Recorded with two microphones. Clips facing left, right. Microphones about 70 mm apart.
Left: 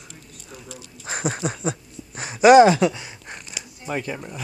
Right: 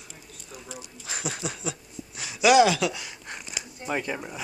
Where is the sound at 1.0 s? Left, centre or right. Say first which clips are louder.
Left 7 dB; left.